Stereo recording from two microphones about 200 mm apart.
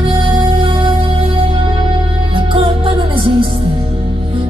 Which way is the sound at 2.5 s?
25° right (ahead or behind).